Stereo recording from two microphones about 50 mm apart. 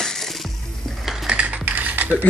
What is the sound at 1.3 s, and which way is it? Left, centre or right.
Mechanisms, right.